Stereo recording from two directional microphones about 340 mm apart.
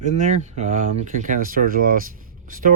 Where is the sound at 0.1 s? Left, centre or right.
Right.